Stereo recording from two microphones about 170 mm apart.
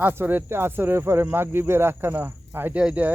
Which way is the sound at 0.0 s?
10° right (ahead or behind).